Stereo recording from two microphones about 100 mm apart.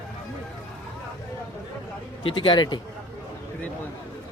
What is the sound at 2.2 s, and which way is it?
Speech, 60° left (ahead or behind).